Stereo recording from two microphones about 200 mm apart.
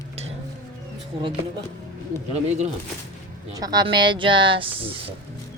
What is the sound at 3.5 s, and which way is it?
Speech, 20° right (ahead or behind).